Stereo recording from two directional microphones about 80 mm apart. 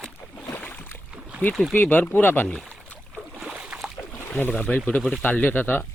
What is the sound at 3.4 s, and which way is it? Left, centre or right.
Boat, centre.